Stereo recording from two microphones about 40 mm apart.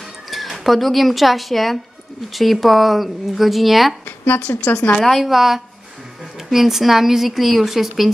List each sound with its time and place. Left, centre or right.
0.3 s speech: centre
4.5 s speech: left
5.0 s a woman's voice: centre